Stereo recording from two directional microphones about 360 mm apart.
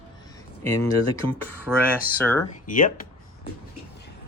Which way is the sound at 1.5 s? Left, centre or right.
Centre.